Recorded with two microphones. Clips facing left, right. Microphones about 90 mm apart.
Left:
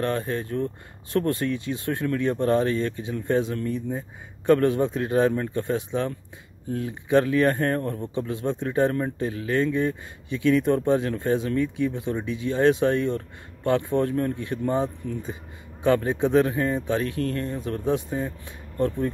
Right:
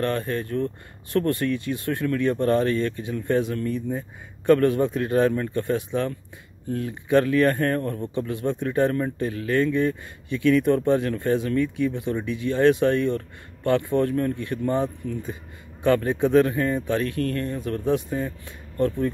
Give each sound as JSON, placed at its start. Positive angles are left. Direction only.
{"t": 0.0, "sound": "speech", "side_deg": 20}
{"t": 8.0, "sound": "speech", "side_deg": 20}
{"t": 15.8, "sound": "speech", "side_deg": 20}
{"t": 17.2, "sound": "speech", "side_deg": -55}
{"t": 17.5, "sound": "speech", "side_deg": 25}
{"t": 18.9, "sound": "speech", "side_deg": 35}